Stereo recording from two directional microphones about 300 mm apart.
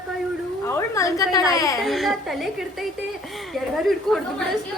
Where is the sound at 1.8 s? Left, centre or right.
Centre.